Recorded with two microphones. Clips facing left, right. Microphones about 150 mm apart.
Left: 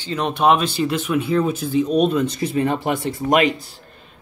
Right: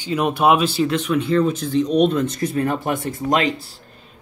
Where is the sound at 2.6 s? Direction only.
25° left (ahead or behind).